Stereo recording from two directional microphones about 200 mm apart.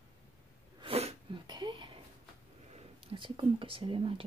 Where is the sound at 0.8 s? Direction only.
30° right (ahead or behind).